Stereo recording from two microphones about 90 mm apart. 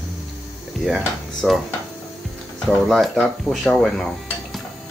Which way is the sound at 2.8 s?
Centre (ahead or behind).